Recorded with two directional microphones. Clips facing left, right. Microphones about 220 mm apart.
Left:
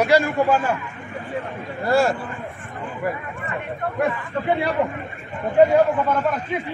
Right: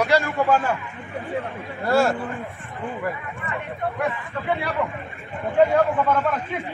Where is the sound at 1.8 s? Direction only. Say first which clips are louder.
Left 1 dB; centre (ahead or behind).